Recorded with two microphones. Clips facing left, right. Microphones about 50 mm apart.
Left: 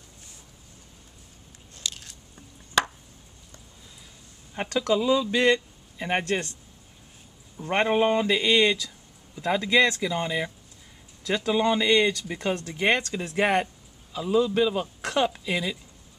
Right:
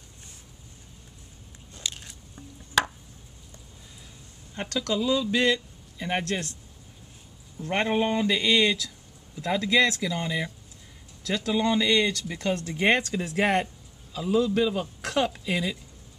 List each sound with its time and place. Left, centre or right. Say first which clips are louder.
1.8 s biting: even; centre
2.3 s chopping: even; centre
4.6 s speech: left 4 dB; centre
7.5 s speech: left 2 dB; centre
12.6 s speech: right 1 dB; centre